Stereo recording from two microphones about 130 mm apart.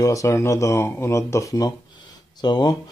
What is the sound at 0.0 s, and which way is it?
Speech, 25° left (ahead or behind).